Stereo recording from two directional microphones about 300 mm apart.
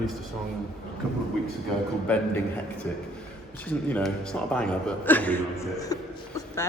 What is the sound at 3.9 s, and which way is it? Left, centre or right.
Speech, centre.